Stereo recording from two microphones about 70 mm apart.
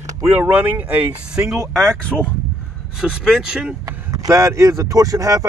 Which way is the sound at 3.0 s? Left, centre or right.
Centre.